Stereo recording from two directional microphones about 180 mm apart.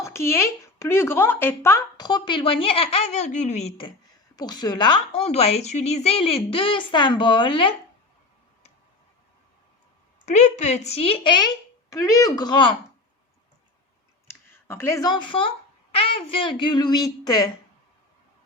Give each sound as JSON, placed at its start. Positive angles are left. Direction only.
{"t": 0.0, "sound": "speech", "side_deg": 15}
{"t": 2.0, "sound": "speech", "side_deg": 25}
{"t": 4.4, "sound": "a woman's voice", "side_deg": 25}
{"t": 10.2, "sound": "a woman's voice", "side_deg": 40}
{"t": 14.3, "sound": "a child's voice", "side_deg": 15}